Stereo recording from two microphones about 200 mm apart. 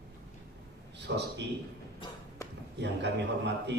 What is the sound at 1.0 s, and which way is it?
Speech, 60° right (ahead or behind).